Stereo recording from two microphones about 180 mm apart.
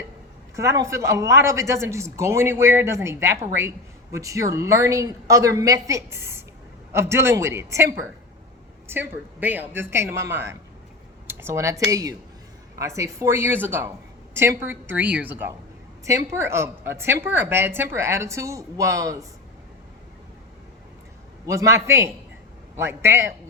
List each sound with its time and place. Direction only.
0.5 s speech: 15° right (ahead or behind)
21.4 s speech: 15° right (ahead or behind)